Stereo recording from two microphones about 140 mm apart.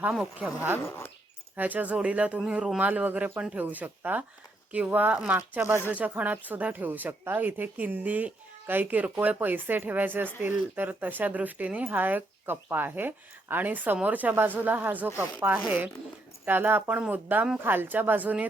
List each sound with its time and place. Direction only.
0.0 s speech: 5° right (ahead or behind)
0.8 s speech: 20° left (ahead or behind)
1.5 s speech: 10° right (ahead or behind)